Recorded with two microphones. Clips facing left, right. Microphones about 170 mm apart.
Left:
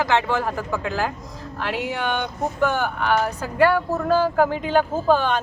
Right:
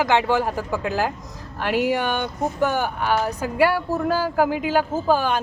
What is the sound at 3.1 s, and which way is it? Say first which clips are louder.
Speech: left 1 dB; 10° right (ahead or behind).